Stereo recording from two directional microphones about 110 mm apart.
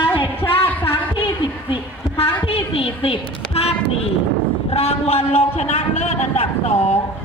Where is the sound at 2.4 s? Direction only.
60° left (ahead or behind).